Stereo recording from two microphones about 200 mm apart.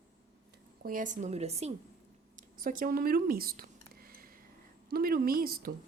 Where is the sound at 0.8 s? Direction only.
40° right (ahead or behind).